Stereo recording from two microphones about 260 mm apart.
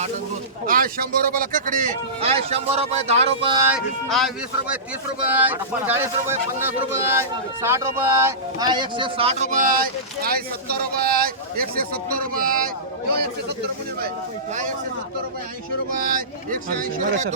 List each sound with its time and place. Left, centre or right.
0.6 s speech: right
3.7 s speech: centre
5.3 s speech: centre; by 12.7 s right
16.0 s speech: right